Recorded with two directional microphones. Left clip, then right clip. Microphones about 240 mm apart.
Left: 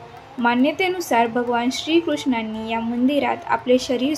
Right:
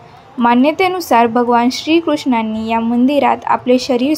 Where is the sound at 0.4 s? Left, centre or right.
Right.